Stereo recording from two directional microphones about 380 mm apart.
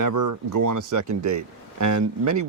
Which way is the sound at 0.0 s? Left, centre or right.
Right.